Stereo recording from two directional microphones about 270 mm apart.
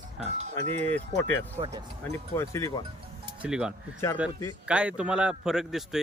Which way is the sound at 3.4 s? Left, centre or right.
Centre.